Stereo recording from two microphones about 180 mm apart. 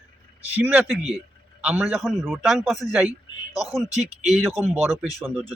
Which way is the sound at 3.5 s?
20° left (ahead or behind).